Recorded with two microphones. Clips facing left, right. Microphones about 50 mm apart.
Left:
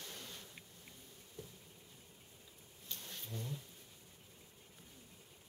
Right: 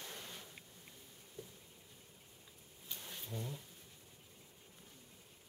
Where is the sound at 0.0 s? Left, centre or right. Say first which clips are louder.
Right 1 dB; centre.